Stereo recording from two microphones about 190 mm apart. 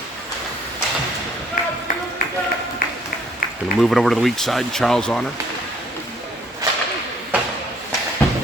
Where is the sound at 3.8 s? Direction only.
Centre (ahead or behind).